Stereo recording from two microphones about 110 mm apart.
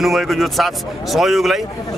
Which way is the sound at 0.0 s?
Centre (ahead or behind).